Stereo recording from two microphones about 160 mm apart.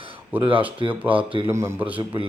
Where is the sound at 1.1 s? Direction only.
35° right (ahead or behind).